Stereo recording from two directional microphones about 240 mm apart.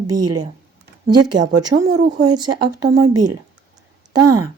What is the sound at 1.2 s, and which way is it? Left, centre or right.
Speech, right.